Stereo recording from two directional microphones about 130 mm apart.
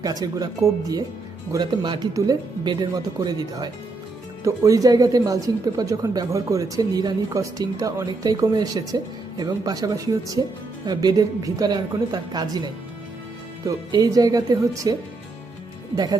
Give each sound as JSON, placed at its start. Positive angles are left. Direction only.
{"t": 0.0, "sound": "speech", "side_deg": -30}
{"t": 1.5, "sound": "speech", "side_deg": -35}